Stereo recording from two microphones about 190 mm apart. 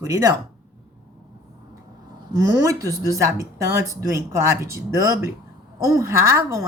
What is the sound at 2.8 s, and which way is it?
Speech, 15° left (ahead or behind).